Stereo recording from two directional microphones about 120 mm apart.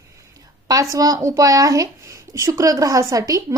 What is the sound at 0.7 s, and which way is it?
A woman's voice, 30° right (ahead or behind).